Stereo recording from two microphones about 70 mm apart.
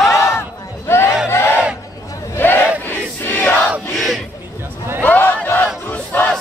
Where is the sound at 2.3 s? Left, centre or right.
Left.